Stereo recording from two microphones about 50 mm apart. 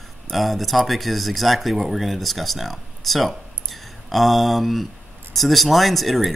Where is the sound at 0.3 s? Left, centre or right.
Centre.